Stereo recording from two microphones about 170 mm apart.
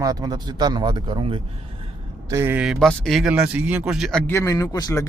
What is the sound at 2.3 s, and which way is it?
Speech, 15° right (ahead or behind).